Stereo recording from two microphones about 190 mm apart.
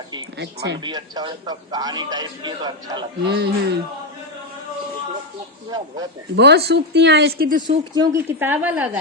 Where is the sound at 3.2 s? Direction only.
60° right (ahead or behind).